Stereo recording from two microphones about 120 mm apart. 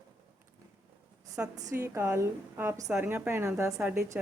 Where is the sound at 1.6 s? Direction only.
20° right (ahead or behind).